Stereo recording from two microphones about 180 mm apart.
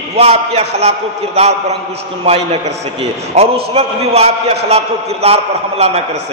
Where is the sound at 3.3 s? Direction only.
35° right (ahead or behind).